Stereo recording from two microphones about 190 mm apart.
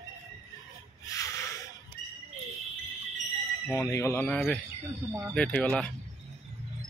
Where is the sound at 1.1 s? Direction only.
15° left (ahead or behind).